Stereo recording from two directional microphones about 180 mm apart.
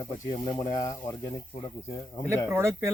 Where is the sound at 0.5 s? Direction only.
20° left (ahead or behind).